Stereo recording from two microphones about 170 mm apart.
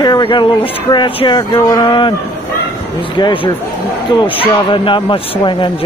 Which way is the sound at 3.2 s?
25° left (ahead or behind).